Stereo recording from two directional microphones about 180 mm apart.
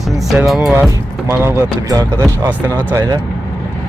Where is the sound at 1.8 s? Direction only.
20° right (ahead or behind).